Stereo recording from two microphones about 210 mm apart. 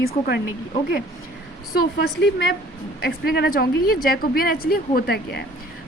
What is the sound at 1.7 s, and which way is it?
Speech, 50° left (ahead or behind).